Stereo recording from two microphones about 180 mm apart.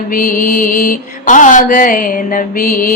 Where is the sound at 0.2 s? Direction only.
50° left (ahead or behind).